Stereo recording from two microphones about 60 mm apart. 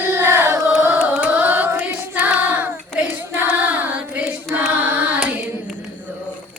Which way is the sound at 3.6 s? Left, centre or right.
Right.